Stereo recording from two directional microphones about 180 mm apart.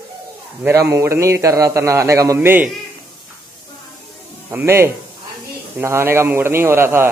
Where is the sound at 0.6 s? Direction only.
15° right (ahead or behind).